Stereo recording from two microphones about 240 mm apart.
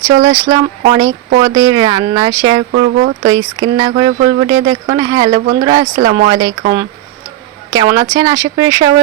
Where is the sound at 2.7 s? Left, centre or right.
Right.